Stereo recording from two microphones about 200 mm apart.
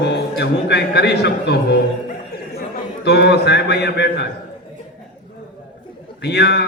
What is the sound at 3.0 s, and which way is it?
A man's voice, 55° left (ahead or behind).